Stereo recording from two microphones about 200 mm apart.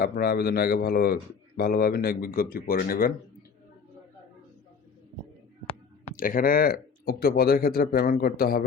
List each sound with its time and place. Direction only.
0.0 s speech: 50° left (ahead or behind)
6.1 s speech: 45° left (ahead or behind)